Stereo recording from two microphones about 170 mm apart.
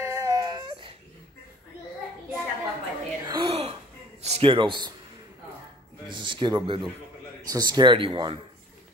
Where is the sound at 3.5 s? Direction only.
40° right (ahead or behind).